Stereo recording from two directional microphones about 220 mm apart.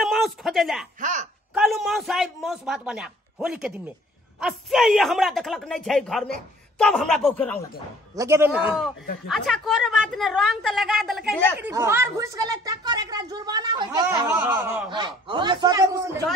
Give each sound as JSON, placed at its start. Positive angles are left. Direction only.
{"t": 0.0, "sound": "a sound", "side_deg": 0}
{"t": 1.0, "sound": "speech", "side_deg": -35}
{"t": 1.5, "sound": "a man's voice", "side_deg": 0}
{"t": 8.2, "sound": "a woman's voice", "side_deg": -10}
{"t": 11.6, "sound": "a woman's voice", "side_deg": -10}
{"t": 14.0, "sound": "a woman's voice", "side_deg": -10}
{"t": 14.9, "sound": "a man's voice", "side_deg": -20}